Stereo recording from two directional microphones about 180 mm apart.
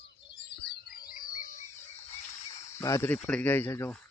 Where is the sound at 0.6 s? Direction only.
55° left (ahead or behind).